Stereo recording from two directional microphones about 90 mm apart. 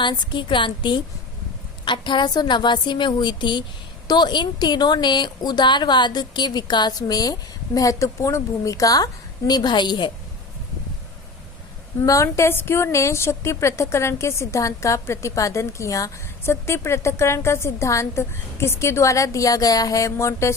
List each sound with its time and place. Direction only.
0.0 s a woman's voice: 60° left (ahead or behind); by 9.0 s 40° left (ahead or behind)
9.5 s a woman's voice: 55° left (ahead or behind)
12.0 s a woman's voice: 35° left (ahead or behind)